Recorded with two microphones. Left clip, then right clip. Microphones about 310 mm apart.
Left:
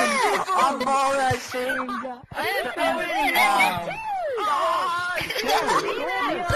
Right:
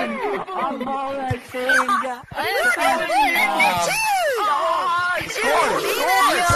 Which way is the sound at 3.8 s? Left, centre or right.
Right.